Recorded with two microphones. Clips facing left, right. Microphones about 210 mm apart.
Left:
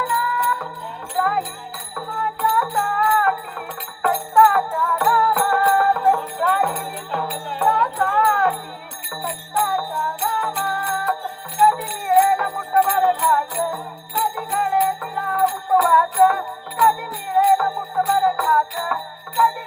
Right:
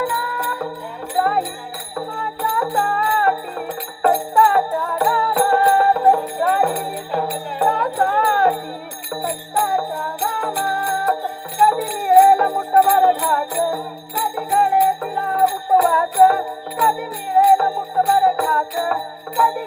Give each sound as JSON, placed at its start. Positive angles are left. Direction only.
{"t": 0.3, "sound": "music", "side_deg": -30}
{"t": 4.1, "sound": "jingle bell", "side_deg": -25}
{"t": 4.7, "sound": "music", "side_deg": -35}